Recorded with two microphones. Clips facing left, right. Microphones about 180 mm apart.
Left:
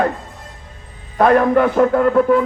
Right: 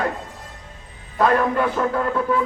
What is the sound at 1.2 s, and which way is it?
A man's voice, 50° left (ahead or behind).